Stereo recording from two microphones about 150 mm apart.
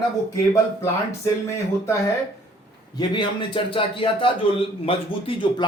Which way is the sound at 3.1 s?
35° left (ahead or behind).